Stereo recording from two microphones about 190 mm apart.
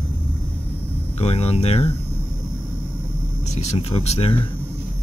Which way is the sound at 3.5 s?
35° left (ahead or behind).